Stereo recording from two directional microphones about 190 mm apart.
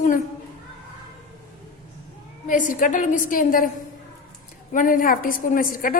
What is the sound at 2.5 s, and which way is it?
A woman's voice, 45° left (ahead or behind).